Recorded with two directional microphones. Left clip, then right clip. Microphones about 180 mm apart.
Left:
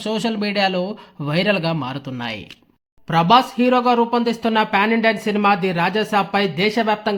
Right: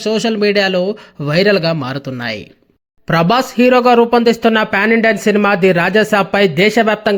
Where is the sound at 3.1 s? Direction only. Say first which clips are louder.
Right 1 dB; 30° right (ahead or behind).